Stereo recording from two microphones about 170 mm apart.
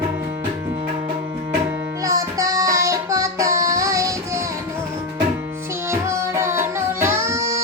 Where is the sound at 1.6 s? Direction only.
15° right (ahead or behind).